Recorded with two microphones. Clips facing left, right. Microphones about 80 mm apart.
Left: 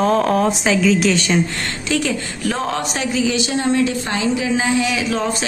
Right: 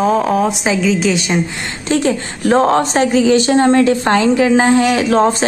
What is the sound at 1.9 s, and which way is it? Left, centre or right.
A woman's voice, right.